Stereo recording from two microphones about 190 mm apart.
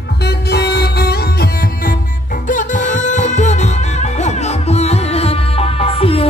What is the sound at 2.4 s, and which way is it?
Music, 40° left (ahead or behind).